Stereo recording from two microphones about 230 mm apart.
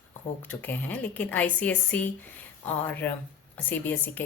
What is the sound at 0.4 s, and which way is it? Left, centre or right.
Speech, centre.